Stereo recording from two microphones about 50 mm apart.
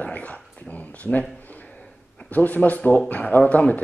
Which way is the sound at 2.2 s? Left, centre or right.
Left.